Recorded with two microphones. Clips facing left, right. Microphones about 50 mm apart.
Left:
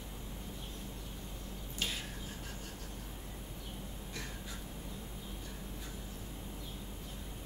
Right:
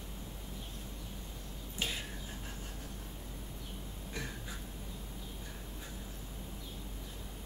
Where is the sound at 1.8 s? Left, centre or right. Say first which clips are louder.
Right 1 dB; right.